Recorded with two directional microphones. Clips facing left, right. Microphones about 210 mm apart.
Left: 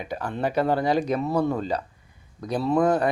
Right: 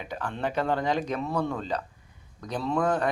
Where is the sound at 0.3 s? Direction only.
10° left (ahead or behind).